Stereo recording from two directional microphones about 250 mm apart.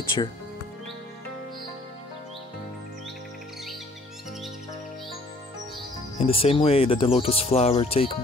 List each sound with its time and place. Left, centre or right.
6.1 s speech: left